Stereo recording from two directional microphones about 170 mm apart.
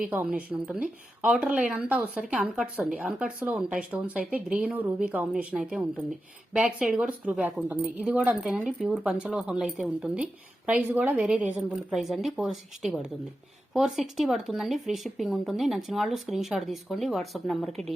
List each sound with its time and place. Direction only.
0.1 s a woman's voice: 10° right (ahead or behind)